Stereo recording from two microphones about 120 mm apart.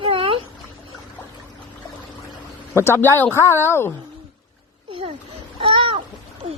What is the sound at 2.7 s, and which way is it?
A woman's voice, 20° left (ahead or behind).